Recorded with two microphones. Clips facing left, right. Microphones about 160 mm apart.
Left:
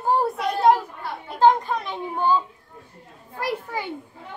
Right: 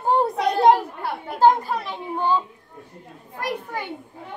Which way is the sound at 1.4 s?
5° right (ahead or behind).